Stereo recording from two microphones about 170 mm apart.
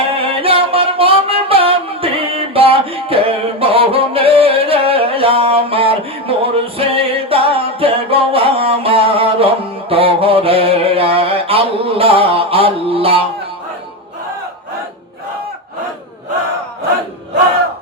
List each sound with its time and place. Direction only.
0.2 s music: 35° right (ahead or behind)
9.9 s mantra: 35° right (ahead or behind)